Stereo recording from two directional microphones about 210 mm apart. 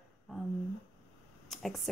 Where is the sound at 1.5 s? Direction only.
Centre (ahead or behind).